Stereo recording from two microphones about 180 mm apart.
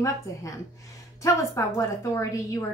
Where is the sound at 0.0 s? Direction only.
15° left (ahead or behind).